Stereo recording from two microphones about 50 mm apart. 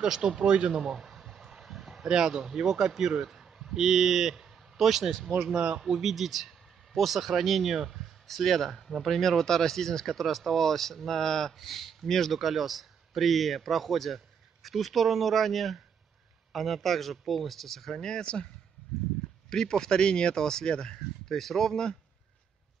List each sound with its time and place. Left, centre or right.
0.0 s speech: centre
0.9 s a sound: centre
2.0 s a man's voice: centre; by 18.5 s left
19.5 s speech: centre